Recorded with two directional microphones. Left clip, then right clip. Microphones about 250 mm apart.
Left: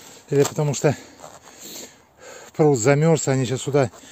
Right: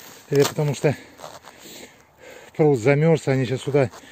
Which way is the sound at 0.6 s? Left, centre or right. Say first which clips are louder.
Left 1 dB; centre.